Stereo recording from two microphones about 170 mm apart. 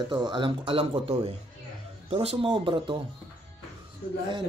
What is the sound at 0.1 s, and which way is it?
Speech, 25° right (ahead or behind).